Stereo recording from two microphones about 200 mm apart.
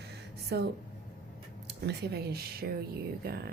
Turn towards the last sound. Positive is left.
turn(degrees=-50)  # may be behind; listen again after turning